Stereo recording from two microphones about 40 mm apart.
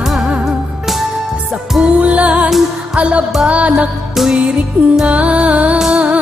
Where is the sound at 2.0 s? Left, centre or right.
Right.